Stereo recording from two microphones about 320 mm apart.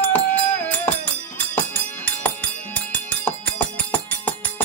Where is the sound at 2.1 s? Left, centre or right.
Centre.